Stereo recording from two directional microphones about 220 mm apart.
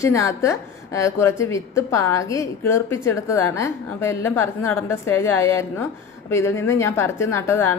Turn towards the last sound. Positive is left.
turn(degrees=10)  # may be behind; listen again after turning